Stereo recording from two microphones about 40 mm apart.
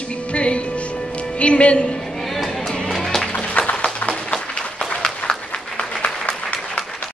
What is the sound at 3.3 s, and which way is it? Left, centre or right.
Music, left.